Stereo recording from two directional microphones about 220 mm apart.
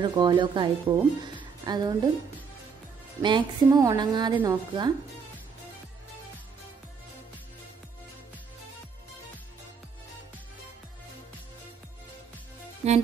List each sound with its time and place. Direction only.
0.0 s a woman's voice: 20° right (ahead or behind)
3.2 s a woman's voice: 20° right (ahead or behind)
12.8 s music: 30° right (ahead or behind)